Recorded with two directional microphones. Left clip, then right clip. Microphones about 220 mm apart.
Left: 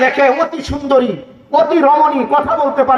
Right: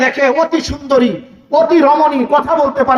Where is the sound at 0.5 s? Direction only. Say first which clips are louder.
Even; 45° right (ahead or behind).